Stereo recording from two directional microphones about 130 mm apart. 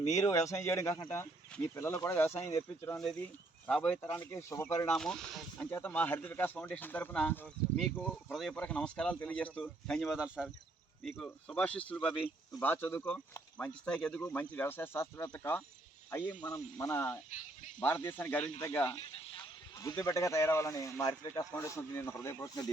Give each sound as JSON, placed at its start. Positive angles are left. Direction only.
{"t": 0.1, "sound": "speech", "side_deg": 25}
{"t": 3.7, "sound": "speech", "side_deg": 10}
{"t": 4.9, "sound": "speech", "side_deg": 5}
{"t": 11.2, "sound": "speech", "side_deg": 10}
{"t": 16.6, "sound": "speech", "side_deg": 25}